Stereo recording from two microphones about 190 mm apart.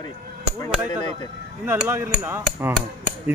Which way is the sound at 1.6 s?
10° right (ahead or behind).